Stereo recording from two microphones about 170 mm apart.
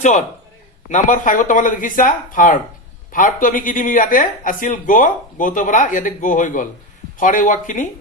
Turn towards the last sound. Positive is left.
turn(degrees=50)  # may be behind; listen again after turning